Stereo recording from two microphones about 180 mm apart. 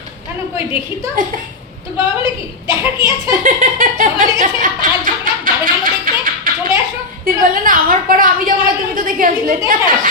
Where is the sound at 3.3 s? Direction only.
50° right (ahead or behind).